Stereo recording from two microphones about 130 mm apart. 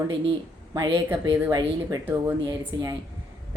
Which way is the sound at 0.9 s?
15° right (ahead or behind).